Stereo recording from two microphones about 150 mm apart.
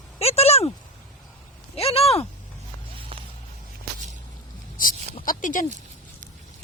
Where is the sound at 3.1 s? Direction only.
35° right (ahead or behind).